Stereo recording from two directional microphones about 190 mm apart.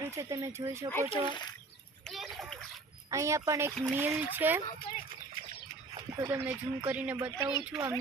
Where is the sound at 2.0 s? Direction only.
Centre (ahead or behind).